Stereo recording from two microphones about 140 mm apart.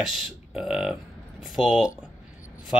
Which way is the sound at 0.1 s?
5° right (ahead or behind).